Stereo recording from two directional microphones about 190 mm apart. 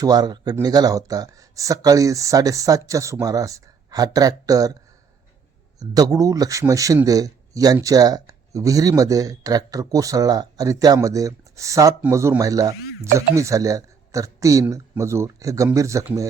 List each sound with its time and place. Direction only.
0.0 s speech: 20° right (ahead or behind)
5.8 s speech: 20° right (ahead or behind)